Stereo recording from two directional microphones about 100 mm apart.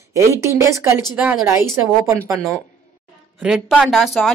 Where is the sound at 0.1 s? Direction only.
30° right (ahead or behind).